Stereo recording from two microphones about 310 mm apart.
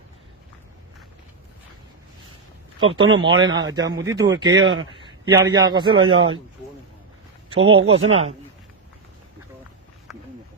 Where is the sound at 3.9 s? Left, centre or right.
Centre.